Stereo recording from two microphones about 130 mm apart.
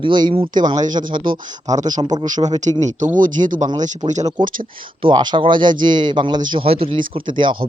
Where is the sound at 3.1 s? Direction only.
90° right.